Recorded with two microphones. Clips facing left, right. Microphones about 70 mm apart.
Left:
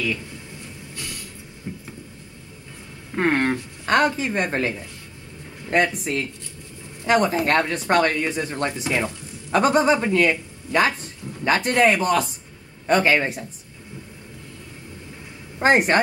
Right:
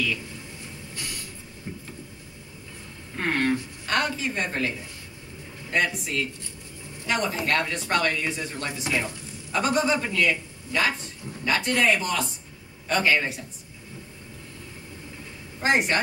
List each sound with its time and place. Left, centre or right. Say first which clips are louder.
3.2 s speech: left 4 dB; left
12.8 s speech: left 5 dB; left
15.6 s speech: left 6 dB; left